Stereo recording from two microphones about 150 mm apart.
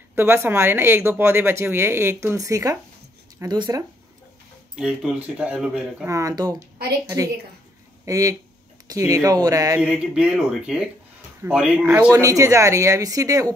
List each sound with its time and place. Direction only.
0.1 s speech: 15° right (ahead or behind)
4.7 s speech: 5° right (ahead or behind)
6.0 s speech: 20° right (ahead or behind)
8.0 s speech: 20° right (ahead or behind)
9.8 s speech: 5° right (ahead or behind)
12.1 s speech: 20° right (ahead or behind)